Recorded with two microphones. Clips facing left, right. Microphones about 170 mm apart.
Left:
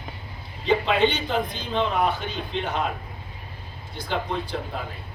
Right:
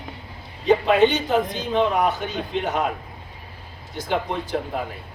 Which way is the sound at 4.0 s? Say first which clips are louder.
Right 3 dB; 45° right (ahead or behind).